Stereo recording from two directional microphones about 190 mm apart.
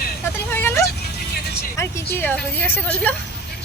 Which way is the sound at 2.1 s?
10° left (ahead or behind).